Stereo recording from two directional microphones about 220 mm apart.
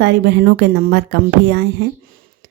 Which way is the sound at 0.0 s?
50° right (ahead or behind).